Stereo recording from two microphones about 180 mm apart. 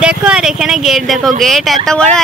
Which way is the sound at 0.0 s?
5° right (ahead or behind).